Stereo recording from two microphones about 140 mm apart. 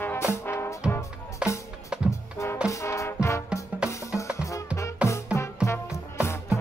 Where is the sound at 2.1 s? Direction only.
20° left (ahead or behind).